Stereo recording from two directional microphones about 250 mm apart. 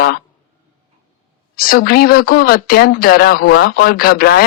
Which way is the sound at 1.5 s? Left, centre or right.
Left.